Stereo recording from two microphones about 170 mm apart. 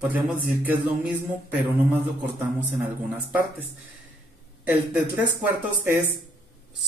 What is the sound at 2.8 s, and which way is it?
Music, 10° right (ahead or behind).